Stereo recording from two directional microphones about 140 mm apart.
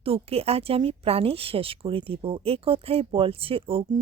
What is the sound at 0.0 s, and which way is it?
Speech, 45° right (ahead or behind).